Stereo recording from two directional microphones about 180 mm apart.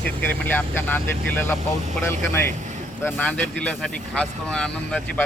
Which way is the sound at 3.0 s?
10° left (ahead or behind).